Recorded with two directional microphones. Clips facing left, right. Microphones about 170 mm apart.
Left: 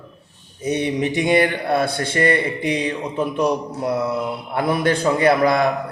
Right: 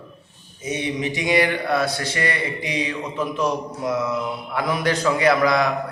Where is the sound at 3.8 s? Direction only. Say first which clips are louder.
Left 2 dB; 35° left (ahead or behind).